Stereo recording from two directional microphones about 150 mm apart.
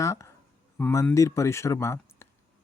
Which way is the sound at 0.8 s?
10° left (ahead or behind).